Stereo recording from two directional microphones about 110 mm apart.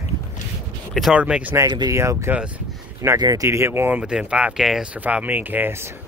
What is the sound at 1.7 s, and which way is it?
Speech, 40° right (ahead or behind).